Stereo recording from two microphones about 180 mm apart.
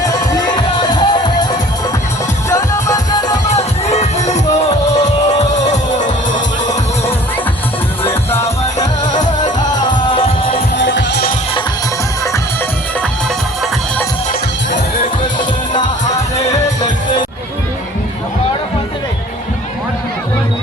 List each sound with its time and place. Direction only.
0.0 s music: 20° left (ahead or behind)
3.5 s music: 35° left (ahead or behind)
9.1 s music: 45° left (ahead or behind)
9.6 s music: 25° left (ahead or behind)
10.8 s music: 90° left